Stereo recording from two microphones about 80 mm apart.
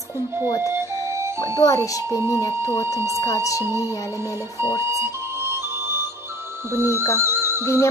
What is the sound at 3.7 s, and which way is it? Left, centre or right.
Speech, left.